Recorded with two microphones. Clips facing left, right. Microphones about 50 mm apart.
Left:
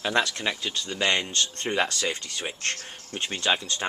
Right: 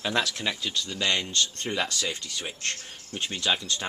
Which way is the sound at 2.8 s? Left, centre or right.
Left.